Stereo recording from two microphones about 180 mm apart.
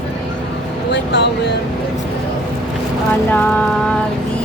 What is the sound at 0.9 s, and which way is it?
Speech, 70° left (ahead or behind).